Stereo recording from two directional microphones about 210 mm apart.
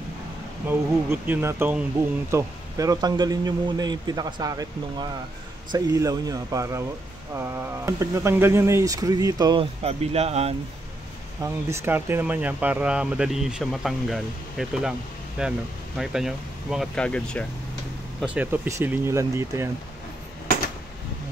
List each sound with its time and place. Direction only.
0.7 s speech: 10° right (ahead or behind); by 10.5 s 30° right (ahead or behind)
11.4 s speech: 10° right (ahead or behind); by 17.5 s 5° left (ahead or behind)
18.2 s speech: 5° right (ahead or behind)